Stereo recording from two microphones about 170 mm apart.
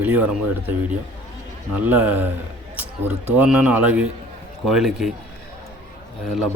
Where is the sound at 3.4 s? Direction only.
10° right (ahead or behind).